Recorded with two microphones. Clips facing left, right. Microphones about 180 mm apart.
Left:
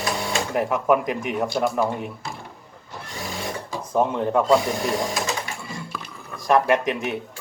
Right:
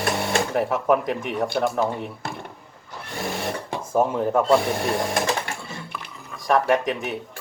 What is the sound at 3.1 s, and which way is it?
Sewing machine, 60° right (ahead or behind).